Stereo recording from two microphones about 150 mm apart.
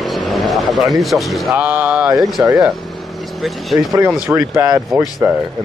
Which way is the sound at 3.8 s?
20° right (ahead or behind).